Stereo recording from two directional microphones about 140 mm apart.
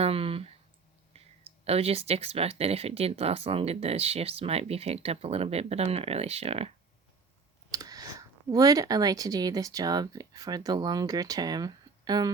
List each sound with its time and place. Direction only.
0.0 s a sound: 45° right (ahead or behind)
1.6 s speech: 45° right (ahead or behind)
7.7 s speech: 25° right (ahead or behind)